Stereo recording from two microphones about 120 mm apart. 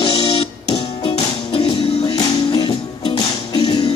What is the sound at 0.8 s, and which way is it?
Music, 60° left (ahead or behind).